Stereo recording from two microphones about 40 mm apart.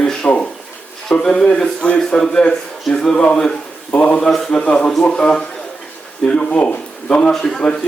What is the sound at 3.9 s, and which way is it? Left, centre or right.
Speech, left.